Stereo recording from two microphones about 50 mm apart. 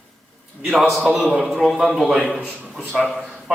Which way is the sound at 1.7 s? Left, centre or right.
Centre.